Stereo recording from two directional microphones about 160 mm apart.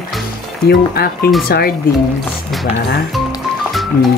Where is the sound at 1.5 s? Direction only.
70° left (ahead or behind).